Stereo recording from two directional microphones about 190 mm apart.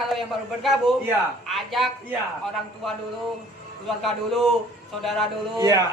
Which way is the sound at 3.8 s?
Centre (ahead or behind).